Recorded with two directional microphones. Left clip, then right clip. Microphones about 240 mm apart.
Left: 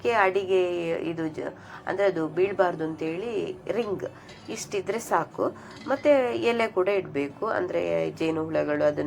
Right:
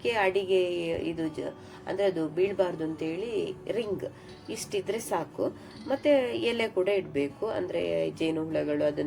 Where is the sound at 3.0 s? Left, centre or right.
Left.